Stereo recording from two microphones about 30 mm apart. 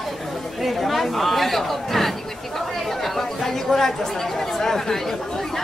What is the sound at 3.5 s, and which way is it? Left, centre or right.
Speech, centre.